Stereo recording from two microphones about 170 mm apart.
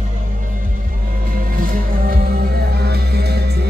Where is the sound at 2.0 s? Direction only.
70° right (ahead or behind).